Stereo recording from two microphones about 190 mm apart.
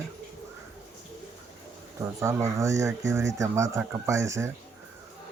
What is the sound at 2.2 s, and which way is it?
Speech, 15° right (ahead or behind).